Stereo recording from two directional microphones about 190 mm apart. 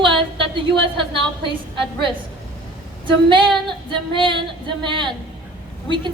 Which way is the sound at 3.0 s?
25° right (ahead or behind).